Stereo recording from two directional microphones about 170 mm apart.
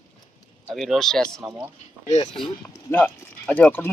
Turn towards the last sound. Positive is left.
turn(degrees=10)  # may be behind; listen again after turning